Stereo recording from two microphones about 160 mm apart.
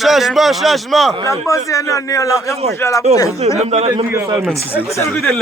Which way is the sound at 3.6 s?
40° right (ahead or behind).